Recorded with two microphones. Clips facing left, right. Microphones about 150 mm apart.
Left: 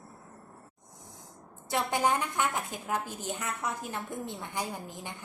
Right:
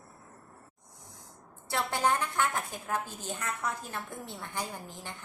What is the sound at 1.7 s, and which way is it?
A woman's voice, 15° left (ahead or behind).